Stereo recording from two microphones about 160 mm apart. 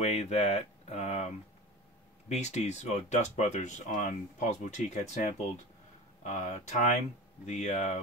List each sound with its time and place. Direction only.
0.0 s speech: 45° left (ahead or behind)